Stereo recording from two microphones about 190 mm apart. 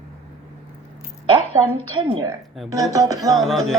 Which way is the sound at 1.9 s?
25° right (ahead or behind).